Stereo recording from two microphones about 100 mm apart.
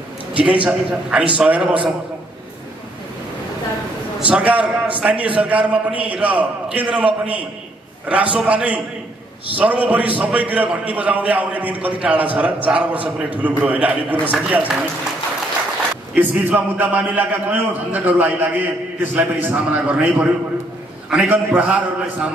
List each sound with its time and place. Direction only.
0.3 s a man's voice: 15° right (ahead or behind)
4.3 s a man's voice: 15° right (ahead or behind)
16.2 s a man's voice: 20° right (ahead or behind)